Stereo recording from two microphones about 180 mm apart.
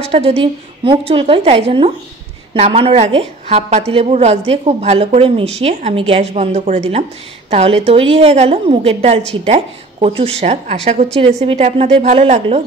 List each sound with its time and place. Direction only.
0.0 s a woman's voice: 35° right (ahead or behind)